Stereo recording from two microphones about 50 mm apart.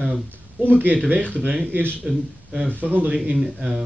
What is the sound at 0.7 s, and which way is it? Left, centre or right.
Speech, right.